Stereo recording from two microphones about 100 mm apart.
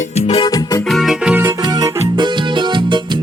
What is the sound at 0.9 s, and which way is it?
Music, centre (ahead or behind).